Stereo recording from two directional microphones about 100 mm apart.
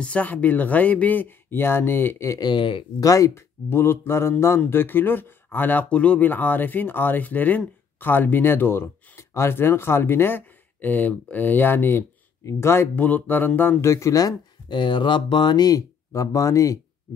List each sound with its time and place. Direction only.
0.0 s speech: 15° left (ahead or behind)
2.4 s speech: 55° left (ahead or behind)
3.0 s speech: 35° left (ahead or behind)
14.7 s speech: 50° left (ahead or behind); by 16.8 s 30° left (ahead or behind)